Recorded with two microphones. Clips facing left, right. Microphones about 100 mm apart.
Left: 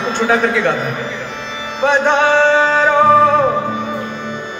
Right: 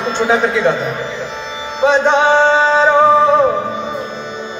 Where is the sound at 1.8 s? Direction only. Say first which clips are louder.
Right 1 dB; 20° right (ahead or behind).